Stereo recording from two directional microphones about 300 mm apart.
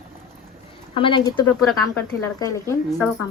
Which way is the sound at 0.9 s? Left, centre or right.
Centre.